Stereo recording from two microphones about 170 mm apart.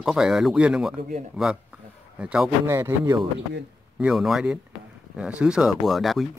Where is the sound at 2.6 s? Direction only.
15° right (ahead or behind).